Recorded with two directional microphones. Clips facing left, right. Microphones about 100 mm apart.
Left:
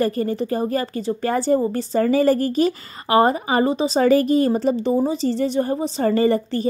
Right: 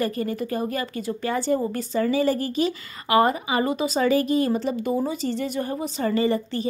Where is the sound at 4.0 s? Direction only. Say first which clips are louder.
Left 5 dB; 40° left (ahead or behind).